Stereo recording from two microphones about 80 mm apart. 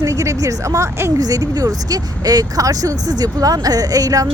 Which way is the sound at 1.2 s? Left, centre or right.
Right.